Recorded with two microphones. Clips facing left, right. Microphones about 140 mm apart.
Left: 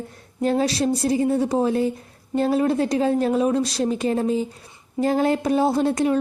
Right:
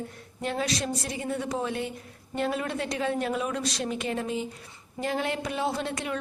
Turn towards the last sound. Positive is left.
turn(degrees=35)  # may be behind; listen again after turning